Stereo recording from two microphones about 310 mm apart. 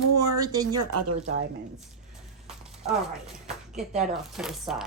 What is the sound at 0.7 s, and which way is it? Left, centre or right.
Speech, right.